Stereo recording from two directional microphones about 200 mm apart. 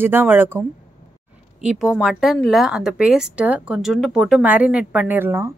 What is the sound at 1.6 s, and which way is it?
A woman's voice, 5° right (ahead or behind).